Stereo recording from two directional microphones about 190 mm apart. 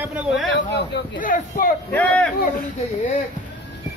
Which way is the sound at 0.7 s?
45° left (ahead or behind).